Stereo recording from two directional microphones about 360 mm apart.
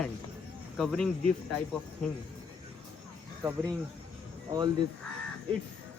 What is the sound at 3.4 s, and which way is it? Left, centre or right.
Speech, centre.